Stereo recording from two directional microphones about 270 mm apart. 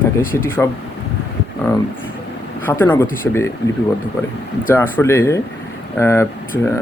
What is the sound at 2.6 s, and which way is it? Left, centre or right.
Speech, centre.